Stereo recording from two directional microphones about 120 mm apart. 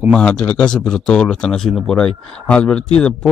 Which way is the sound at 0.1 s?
10° left (ahead or behind).